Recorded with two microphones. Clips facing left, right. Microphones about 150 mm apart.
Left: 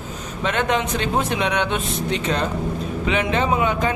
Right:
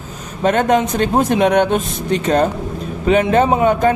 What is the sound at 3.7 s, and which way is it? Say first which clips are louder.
Speech: right 8 dB; 45° right (ahead or behind).